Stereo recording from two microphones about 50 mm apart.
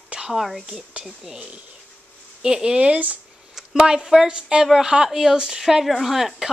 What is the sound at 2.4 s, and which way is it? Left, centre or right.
A woman's voice, centre.